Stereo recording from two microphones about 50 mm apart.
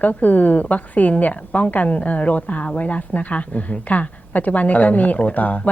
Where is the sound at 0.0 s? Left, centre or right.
Left.